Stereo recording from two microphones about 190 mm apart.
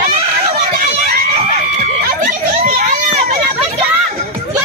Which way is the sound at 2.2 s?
45° right (ahead or behind).